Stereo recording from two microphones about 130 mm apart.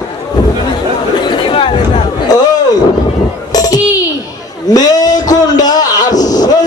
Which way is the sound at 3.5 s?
30° left (ahead or behind).